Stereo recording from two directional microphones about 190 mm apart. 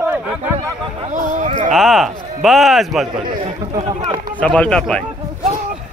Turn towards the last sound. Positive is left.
turn(degrees=5)  # may be behind; listen again after turning